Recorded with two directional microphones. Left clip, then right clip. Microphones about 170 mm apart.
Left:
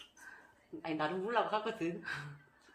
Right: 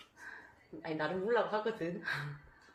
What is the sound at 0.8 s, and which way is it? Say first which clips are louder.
A woman's voice: right 1 dB; 15° left (ahead or behind).